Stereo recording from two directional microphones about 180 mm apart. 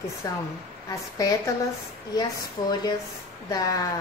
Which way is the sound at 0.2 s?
20° left (ahead or behind).